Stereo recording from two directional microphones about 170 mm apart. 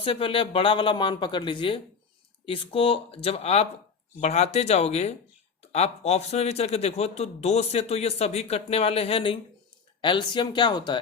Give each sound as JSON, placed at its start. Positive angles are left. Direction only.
{"t": 0.0, "sound": "speech", "side_deg": 30}